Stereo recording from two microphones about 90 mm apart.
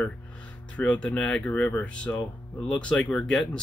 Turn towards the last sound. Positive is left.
turn(degrees=5)  # may be behind; listen again after turning